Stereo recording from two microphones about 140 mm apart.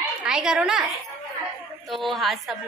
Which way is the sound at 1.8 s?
Centre (ahead or behind).